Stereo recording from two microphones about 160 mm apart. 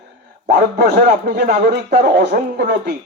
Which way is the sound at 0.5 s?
70° right (ahead or behind).